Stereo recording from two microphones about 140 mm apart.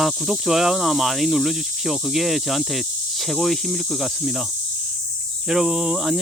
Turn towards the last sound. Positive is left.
turn(degrees=-5)  # may be behind; listen again after turning